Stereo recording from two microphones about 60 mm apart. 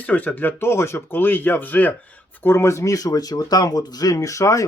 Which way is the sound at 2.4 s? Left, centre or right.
Left.